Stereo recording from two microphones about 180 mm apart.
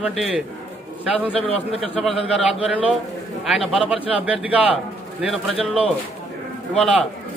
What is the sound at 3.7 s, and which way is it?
Speech, 5° right (ahead or behind).